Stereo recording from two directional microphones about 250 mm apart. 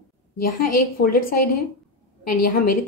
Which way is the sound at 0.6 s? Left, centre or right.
Left.